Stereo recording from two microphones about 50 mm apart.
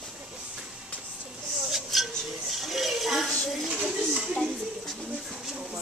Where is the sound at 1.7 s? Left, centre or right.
Centre.